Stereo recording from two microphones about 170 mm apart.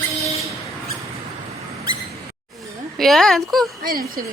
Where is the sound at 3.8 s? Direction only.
60° right (ahead or behind).